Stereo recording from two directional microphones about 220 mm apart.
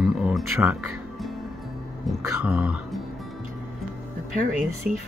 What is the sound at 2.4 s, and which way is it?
Speech, 5° right (ahead or behind).